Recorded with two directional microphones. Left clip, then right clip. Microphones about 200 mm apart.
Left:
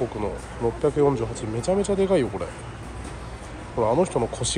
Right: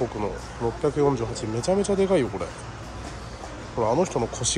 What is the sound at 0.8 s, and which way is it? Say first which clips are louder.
Speech: left 1 dB; 10° right (ahead or behind).